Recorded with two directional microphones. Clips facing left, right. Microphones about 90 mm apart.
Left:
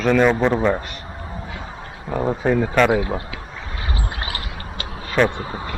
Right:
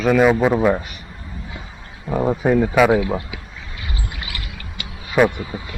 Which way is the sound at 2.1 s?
5° right (ahead or behind).